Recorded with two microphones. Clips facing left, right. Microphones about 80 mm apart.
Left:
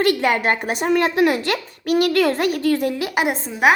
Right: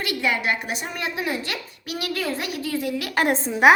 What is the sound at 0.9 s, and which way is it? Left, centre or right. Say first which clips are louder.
A child's voice: left 13 dB; left.